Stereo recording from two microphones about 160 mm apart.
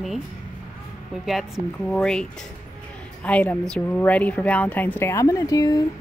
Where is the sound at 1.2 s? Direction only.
Centre (ahead or behind).